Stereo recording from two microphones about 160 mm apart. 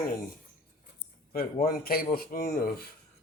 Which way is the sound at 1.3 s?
65° left (ahead or behind).